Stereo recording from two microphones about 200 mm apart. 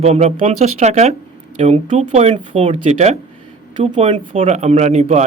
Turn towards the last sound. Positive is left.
turn(degrees=-35)  # may be behind; listen again after turning